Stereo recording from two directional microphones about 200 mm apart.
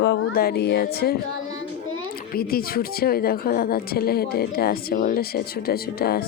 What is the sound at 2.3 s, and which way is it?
A woman's voice, 50° left (ahead or behind).